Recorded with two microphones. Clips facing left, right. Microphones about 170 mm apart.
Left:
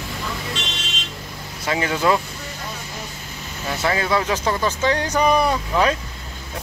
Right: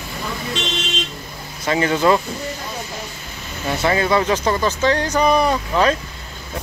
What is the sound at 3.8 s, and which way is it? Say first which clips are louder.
Speech: right 3 dB; centre (ahead or behind).